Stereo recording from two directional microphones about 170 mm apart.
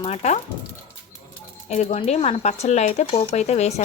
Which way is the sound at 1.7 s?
40° left (ahead or behind).